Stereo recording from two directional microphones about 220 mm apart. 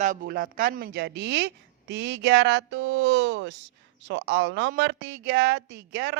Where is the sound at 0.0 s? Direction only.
40° right (ahead or behind).